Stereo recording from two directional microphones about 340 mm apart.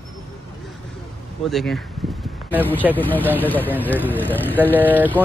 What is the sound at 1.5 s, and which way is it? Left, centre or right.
A man's voice, centre.